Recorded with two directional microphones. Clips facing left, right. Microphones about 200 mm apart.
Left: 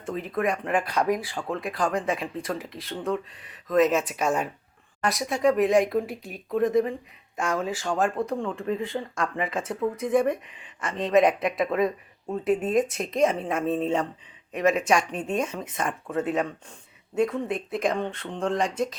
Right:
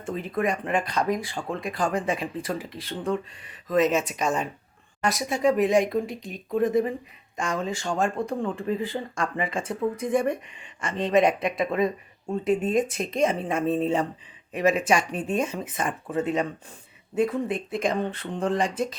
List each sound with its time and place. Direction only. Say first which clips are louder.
0.0 s speech: even; centre (ahead or behind)